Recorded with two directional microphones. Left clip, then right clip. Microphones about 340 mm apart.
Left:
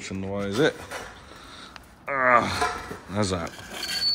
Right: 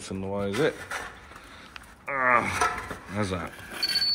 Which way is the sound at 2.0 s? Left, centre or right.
Centre.